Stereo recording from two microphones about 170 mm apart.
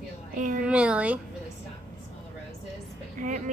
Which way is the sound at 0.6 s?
5° right (ahead or behind).